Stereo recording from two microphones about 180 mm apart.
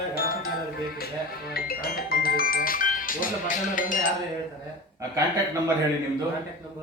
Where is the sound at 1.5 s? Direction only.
55° left (ahead or behind).